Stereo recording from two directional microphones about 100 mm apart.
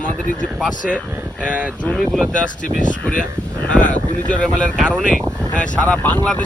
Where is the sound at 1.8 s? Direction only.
10° left (ahead or behind).